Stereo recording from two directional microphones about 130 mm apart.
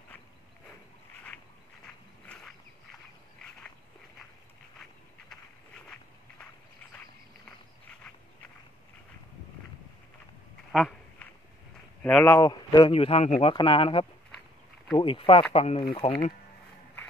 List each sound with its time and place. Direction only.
2.2 s a sound: 5° left (ahead or behind)
10.7 s duck: 5° right (ahead or behind)
12.0 s speech: 10° left (ahead or behind)
12.4 s a man's voice: 35° left (ahead or behind)
12.9 s speech: 50° left (ahead or behind)
13.5 s speech: 45° left (ahead or behind)
15.5 s speech: 55° left (ahead or behind)
16.0 s speech: 45° left (ahead or behind)